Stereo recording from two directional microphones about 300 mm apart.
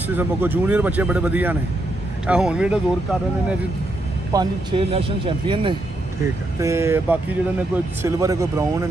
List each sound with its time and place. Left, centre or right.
0.1 s speech: centre
4.3 s speech: centre